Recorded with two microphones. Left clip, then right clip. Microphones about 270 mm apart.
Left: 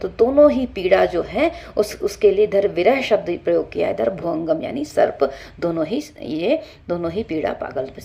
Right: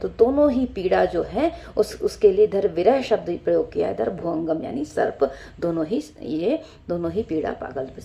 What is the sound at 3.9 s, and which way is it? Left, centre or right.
Speech, left.